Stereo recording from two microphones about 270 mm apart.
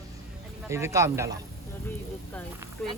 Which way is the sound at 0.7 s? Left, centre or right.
Centre.